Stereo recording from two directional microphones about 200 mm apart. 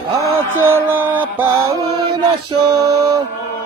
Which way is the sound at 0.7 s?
10° right (ahead or behind).